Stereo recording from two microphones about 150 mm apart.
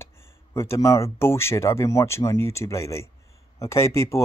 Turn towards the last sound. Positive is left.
turn(degrees=20)  # may be behind; listen again after turning